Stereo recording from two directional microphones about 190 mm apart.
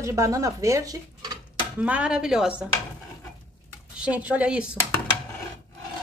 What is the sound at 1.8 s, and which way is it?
Speech, 5° right (ahead or behind).